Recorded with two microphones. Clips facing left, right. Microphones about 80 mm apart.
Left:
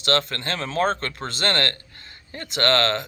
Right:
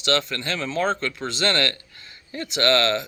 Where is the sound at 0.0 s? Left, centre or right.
Left.